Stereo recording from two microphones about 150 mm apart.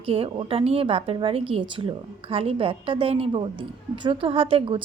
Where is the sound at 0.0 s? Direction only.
40° right (ahead or behind).